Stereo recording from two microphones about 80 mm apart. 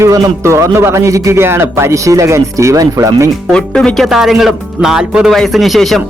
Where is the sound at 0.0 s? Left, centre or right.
Right.